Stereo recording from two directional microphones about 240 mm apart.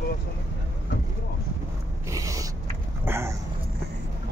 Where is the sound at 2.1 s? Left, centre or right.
Centre.